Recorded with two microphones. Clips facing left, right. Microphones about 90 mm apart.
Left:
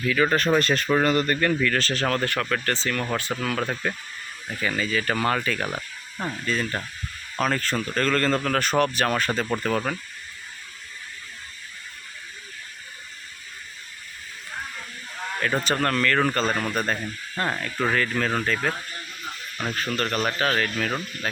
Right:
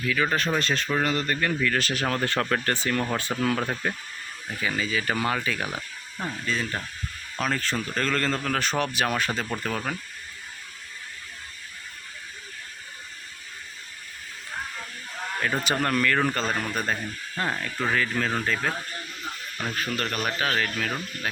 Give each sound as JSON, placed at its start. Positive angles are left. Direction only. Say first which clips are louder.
{"t": 0.0, "sound": "speech", "louder": "left 3 dB", "side_deg": 0}
{"t": 2.2, "sound": "speech", "louder": "even", "side_deg": -25}
{"t": 5.7, "sound": "a sound", "louder": "left 2 dB", "side_deg": 10}
{"t": 6.4, "sound": "speech", "louder": "left 2 dB", "side_deg": 0}
{"t": 15.6, "sound": "speech", "louder": "even", "side_deg": -10}